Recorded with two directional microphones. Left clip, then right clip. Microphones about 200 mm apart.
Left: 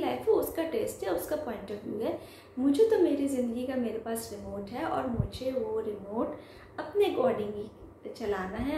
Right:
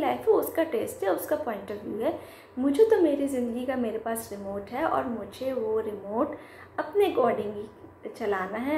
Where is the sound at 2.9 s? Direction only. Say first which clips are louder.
Right 3 dB; centre (ahead or behind).